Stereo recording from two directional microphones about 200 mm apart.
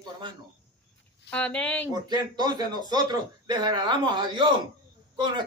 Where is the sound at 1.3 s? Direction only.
5° left (ahead or behind).